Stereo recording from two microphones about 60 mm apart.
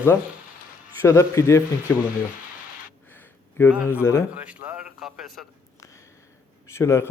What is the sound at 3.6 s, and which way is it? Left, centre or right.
Speech, left.